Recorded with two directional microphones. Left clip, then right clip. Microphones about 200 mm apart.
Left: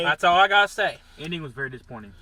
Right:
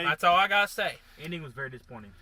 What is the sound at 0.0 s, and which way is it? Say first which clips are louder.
Speech: left 5 dB; 20° right (ahead or behind).